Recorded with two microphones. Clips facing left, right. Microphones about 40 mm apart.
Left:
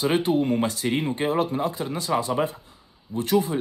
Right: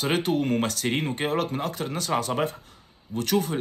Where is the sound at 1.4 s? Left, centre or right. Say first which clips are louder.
Left 3 dB; right.